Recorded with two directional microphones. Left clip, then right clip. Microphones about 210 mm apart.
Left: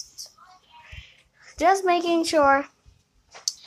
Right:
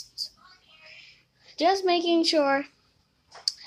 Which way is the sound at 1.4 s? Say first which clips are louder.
Left 3 dB; 5° right (ahead or behind).